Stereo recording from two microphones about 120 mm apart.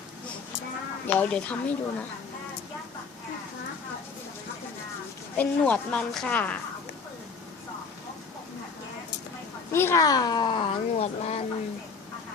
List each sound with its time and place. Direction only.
1.0 s a woman's voice: 15° left (ahead or behind)
5.4 s a woman's voice: 15° left (ahead or behind)
9.7 s speech: 20° left (ahead or behind); by 10.7 s 40° left (ahead or behind)
10.9 s speech: 65° left (ahead or behind)